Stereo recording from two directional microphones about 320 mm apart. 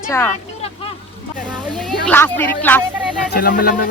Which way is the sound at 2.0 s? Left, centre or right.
Centre.